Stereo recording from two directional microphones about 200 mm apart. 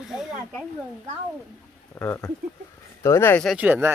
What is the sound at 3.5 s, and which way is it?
Speech, 5° right (ahead or behind).